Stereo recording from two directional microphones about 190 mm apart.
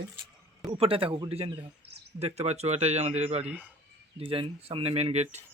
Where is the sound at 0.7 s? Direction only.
30° right (ahead or behind).